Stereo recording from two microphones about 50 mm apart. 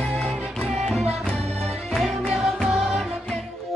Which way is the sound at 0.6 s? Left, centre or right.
Centre.